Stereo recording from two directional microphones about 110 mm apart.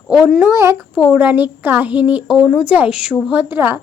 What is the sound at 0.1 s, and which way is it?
Speech, centre (ahead or behind).